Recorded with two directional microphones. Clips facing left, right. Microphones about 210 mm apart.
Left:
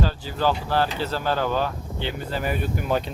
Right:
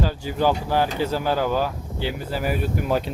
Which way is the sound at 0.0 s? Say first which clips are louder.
Right 2 dB; 15° right (ahead or behind).